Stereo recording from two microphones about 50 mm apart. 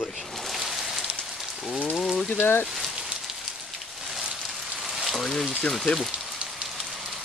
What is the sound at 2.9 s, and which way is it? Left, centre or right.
Rain on surface, centre.